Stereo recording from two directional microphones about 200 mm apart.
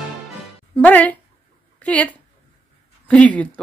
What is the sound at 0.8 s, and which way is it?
Music, 10° left (ahead or behind).